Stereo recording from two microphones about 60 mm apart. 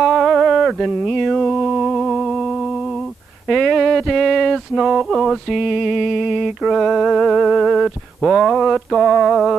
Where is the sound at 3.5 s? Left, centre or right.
Centre.